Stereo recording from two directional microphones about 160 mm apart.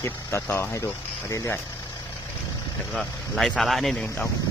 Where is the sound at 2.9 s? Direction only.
5° left (ahead or behind).